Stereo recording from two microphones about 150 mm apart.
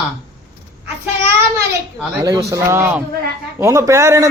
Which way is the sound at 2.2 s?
20° right (ahead or behind).